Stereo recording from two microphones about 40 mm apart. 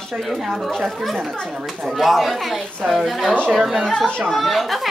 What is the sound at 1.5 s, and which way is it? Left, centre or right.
Speech, centre.